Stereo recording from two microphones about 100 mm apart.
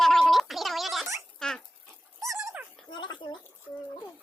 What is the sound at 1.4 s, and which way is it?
Dog, 5° left (ahead or behind).